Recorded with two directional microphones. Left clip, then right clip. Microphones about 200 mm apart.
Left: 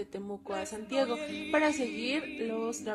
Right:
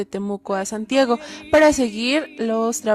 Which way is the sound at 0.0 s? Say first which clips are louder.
Right 12 dB; 55° right (ahead or behind).